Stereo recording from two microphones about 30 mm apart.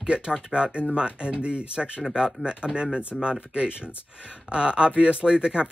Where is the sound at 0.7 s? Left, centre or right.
Right.